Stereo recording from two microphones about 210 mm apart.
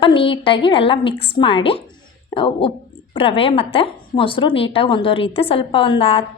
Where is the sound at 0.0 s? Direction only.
25° left (ahead or behind).